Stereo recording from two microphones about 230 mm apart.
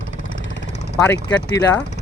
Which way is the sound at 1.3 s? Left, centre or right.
Left.